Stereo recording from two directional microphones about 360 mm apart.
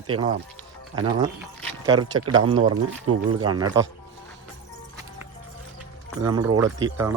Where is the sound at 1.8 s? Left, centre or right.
Centre.